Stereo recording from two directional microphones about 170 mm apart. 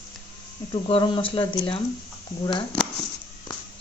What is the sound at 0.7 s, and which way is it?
Speech, 30° left (ahead or behind).